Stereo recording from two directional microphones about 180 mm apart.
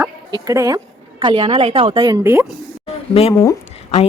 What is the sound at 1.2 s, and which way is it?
Speech, 35° right (ahead or behind).